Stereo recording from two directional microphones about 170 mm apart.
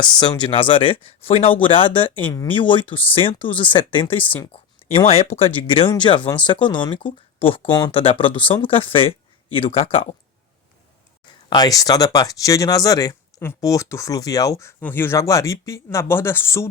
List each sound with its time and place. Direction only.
0.0 s speech: 25° left (ahead or behind)
2.2 s speech: 20° left (ahead or behind)
2.5 s speech: 30° left (ahead or behind)
4.2 s speech: 10° left (ahead or behind)
4.5 s speech: 35° left (ahead or behind)
11.4 s speech: 25° left (ahead or behind)